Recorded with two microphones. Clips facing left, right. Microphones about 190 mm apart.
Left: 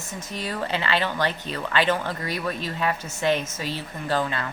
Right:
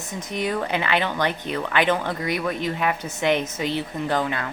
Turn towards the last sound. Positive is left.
turn(degrees=-15)  # may be behind; listen again after turning